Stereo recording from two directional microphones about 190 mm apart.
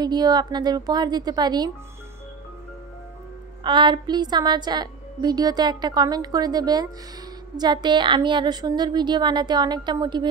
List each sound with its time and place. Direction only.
0.0 s a woman's voice: 20° right (ahead or behind)
3.6 s a woman's voice: 25° right (ahead or behind)